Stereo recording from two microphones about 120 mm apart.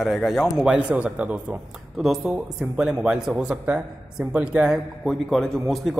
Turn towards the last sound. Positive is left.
turn(degrees=0)  # may be behind; listen again after turning